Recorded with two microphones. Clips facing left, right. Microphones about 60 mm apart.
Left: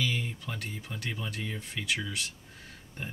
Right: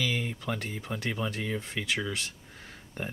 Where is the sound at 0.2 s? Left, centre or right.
Right.